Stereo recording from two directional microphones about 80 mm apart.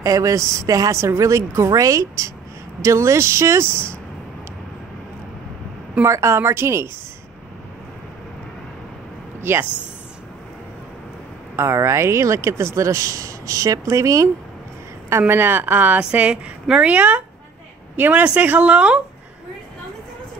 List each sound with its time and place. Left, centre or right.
0.0 s speech: right
6.0 s speech: right
9.4 s speech: right
11.5 s speech: right
15.0 s a woman's voice: right; by 18.9 s centre